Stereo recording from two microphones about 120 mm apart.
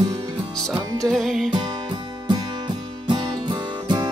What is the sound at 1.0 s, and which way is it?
Music, 5° left (ahead or behind).